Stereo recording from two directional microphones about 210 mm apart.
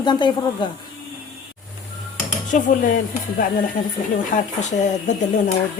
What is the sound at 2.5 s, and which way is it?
Speech, 35° left (ahead or behind).